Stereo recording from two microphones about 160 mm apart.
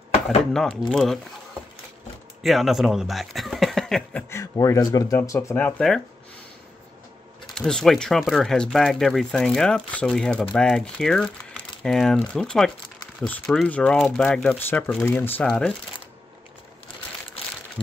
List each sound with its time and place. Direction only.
0.5 s speech: centre (ahead or behind)
2.4 s speech: centre (ahead or behind)
4.3 s speech: 20° left (ahead or behind)
7.4 s speech: 5° left (ahead or behind)